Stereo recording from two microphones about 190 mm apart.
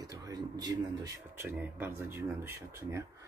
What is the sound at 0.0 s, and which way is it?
Speech, 20° right (ahead or behind).